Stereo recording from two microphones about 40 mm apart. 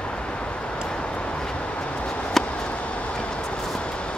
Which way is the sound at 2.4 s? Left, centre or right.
Centre.